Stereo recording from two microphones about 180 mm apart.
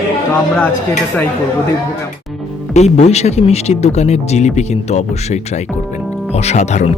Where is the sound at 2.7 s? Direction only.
40° left (ahead or behind).